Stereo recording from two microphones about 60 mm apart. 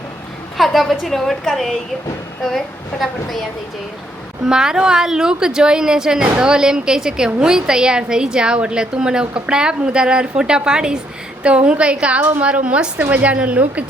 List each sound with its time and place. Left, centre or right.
0.5 s a woman's voice: centre
4.4 s a woman's voice: centre